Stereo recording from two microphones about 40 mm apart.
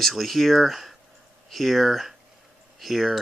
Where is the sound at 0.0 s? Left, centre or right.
Centre.